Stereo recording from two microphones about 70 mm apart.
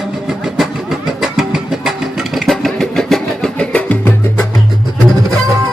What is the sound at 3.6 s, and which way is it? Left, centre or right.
Music, centre.